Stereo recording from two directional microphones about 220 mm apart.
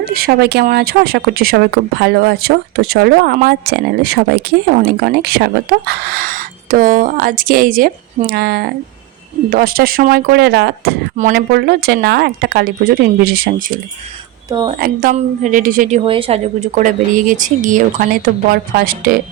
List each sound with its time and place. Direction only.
0.0 s a woman's voice: 45° right (ahead or behind)
14.8 s a woman's voice: 45° right (ahead or behind)